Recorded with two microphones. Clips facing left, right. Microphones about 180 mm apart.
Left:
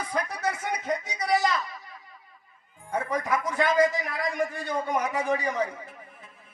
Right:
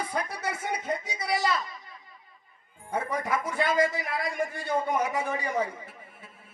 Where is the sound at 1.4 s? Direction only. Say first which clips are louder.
Left 1 dB; 30° right (ahead or behind).